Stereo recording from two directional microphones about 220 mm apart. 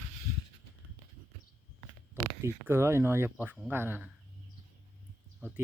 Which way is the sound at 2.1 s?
15° right (ahead or behind).